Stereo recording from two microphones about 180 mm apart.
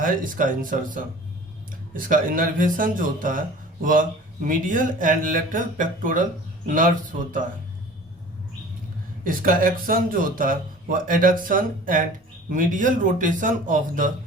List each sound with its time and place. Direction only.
0.0 s speech: 50° right (ahead or behind)
9.2 s speech: 50° right (ahead or behind)